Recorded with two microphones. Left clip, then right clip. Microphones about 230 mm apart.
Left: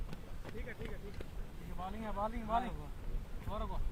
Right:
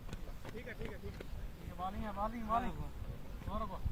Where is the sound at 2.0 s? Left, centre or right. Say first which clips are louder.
Left 1 dB; left.